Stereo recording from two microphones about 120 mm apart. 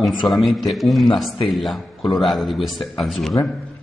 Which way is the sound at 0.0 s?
Centre (ahead or behind).